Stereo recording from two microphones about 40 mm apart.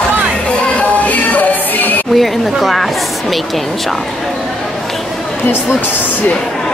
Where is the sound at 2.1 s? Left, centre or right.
Centre.